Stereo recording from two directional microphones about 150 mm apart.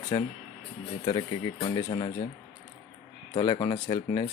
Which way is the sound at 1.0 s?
30° left (ahead or behind).